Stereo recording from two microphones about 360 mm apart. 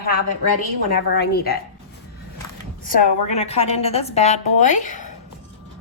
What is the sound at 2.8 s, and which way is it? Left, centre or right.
A woman's voice, centre.